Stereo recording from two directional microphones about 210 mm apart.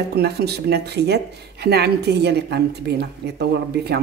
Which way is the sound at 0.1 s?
50° right (ahead or behind).